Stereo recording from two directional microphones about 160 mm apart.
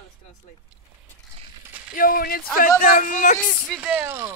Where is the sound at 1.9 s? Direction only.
65° left (ahead or behind).